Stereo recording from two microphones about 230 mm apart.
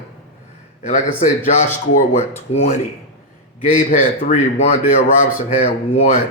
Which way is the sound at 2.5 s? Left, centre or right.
Left.